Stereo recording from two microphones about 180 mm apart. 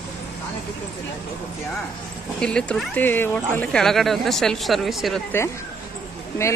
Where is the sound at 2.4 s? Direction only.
5° left (ahead or behind).